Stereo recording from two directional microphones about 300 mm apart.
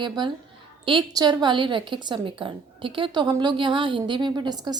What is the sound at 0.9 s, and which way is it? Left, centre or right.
A woman's voice, centre.